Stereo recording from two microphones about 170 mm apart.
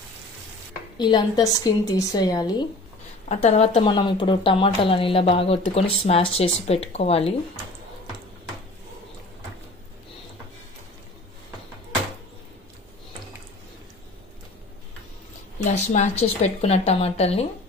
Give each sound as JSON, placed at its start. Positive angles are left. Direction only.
{"t": 0.9, "sound": "a woman's voice", "side_deg": 25}
{"t": 3.3, "sound": "a woman's voice", "side_deg": 40}
{"t": 15.6, "sound": "a woman's voice", "side_deg": 40}